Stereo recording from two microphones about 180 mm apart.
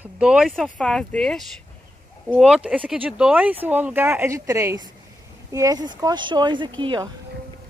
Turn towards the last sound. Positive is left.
turn(degrees=-25)  # may be behind; listen again after turning